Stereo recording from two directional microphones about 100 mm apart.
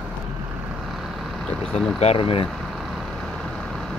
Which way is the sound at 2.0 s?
80° left.